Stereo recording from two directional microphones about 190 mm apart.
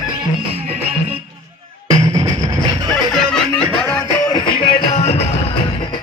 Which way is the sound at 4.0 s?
20° left (ahead or behind).